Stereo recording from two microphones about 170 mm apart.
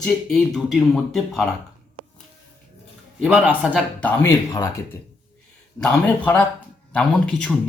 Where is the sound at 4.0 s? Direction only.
15° left (ahead or behind).